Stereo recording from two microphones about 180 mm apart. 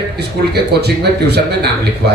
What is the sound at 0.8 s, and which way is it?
Speech, 65° right (ahead or behind).